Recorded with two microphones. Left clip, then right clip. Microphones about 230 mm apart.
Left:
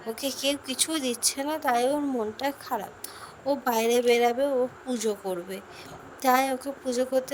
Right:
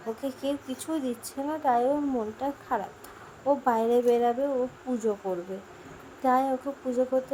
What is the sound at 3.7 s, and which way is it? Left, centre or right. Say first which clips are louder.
Speech: left 3 dB; left.